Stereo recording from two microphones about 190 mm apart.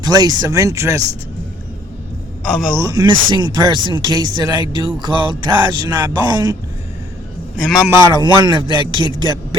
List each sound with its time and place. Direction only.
0.0 s speech: 20° right (ahead or behind)
2.7 s a man's voice: 20° right (ahead or behind)
7.5 s a man's voice: 5° right (ahead or behind)
7.9 s a man's voice: 25° right (ahead or behind)